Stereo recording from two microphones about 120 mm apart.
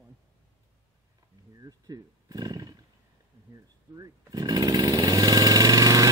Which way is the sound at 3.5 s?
30° right (ahead or behind).